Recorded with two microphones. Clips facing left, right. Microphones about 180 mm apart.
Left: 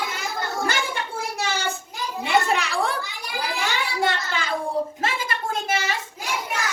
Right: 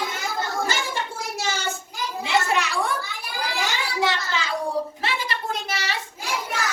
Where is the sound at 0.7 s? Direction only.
60° left (ahead or behind).